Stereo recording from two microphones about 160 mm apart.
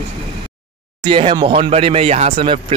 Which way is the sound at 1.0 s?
30° right (ahead or behind).